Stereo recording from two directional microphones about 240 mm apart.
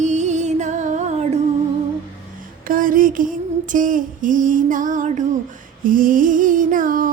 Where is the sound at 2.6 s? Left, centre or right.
Right.